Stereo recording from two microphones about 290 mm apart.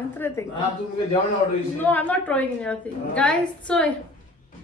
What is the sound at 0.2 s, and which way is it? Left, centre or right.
Speech, centre.